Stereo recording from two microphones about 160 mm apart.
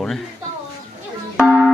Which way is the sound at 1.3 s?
5° right (ahead or behind).